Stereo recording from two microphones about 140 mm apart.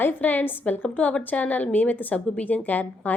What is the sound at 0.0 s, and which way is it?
A woman's voice, 15° left (ahead or behind).